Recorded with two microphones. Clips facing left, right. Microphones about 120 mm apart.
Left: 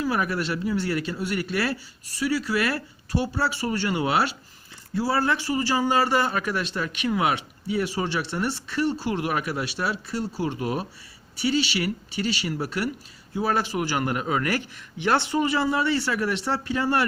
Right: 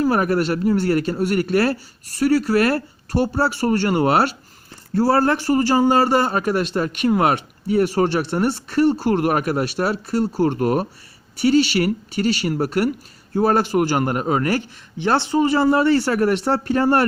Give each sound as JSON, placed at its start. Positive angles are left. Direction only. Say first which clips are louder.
{"t": 0.0, "sound": "a man's voice", "louder": "right 7 dB", "side_deg": -50}
{"t": 11.3, "sound": "a man's voice", "louder": "right 8 dB", "side_deg": -50}